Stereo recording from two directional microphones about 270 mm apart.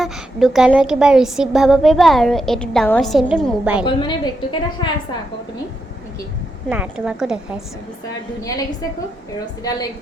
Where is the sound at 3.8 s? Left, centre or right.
Centre.